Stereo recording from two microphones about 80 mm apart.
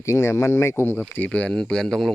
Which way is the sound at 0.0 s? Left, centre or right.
Left.